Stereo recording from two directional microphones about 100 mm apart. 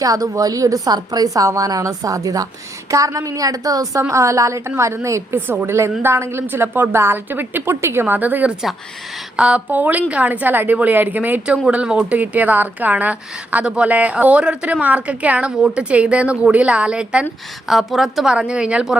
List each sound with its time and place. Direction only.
0.0 s a woman's voice: 35° right (ahead or behind); by 18.9 s 10° right (ahead or behind)